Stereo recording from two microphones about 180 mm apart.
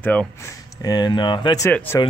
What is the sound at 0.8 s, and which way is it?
Speech, 20° left (ahead or behind).